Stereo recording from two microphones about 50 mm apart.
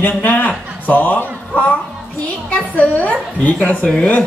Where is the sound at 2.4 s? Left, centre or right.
Left.